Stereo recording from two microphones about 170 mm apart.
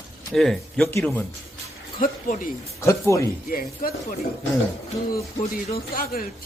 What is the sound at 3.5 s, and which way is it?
Speech, 55° left (ahead or behind).